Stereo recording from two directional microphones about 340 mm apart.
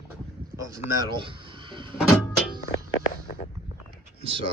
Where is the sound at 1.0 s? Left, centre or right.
Centre.